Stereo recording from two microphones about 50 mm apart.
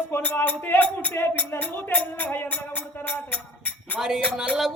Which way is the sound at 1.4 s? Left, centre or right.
Left.